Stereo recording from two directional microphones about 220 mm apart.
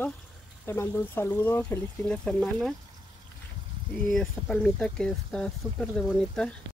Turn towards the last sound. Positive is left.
turn(degrees=5)  # may be behind; listen again after turning